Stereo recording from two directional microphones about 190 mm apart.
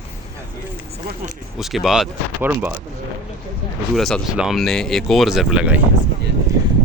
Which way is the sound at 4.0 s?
Centre (ahead or behind).